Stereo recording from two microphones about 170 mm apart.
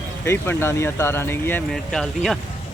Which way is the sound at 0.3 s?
15° left (ahead or behind).